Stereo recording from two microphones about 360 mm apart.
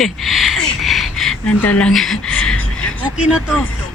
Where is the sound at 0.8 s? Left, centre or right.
Centre.